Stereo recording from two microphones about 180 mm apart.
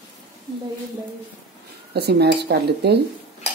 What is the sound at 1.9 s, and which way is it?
Speech, 65° right (ahead or behind).